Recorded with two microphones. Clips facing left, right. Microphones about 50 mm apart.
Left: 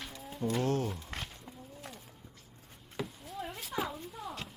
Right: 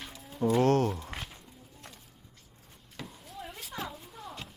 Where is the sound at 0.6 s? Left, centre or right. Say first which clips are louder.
Right 7 dB; right.